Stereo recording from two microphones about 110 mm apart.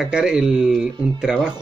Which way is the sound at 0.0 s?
5° right (ahead or behind).